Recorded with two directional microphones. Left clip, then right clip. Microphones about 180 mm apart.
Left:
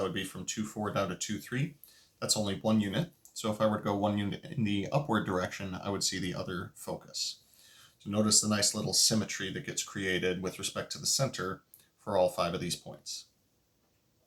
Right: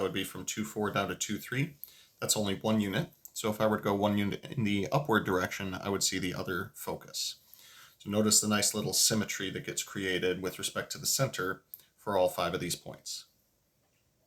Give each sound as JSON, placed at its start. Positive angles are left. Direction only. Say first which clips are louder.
{"t": 0.1, "sound": "speech", "louder": "right 1 dB", "side_deg": -35}